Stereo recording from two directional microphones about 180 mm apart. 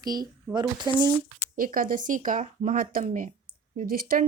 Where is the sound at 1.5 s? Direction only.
50° right (ahead or behind).